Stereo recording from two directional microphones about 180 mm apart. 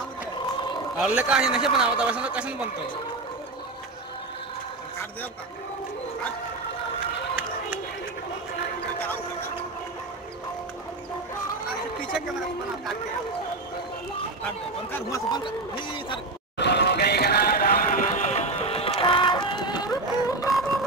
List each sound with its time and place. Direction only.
0.9 s a man's voice: 5° right (ahead or behind)
14.9 s speech: 15° left (ahead or behind)
16.5 s music: 70° left (ahead or behind); by 20.4 s 20° left (ahead or behind)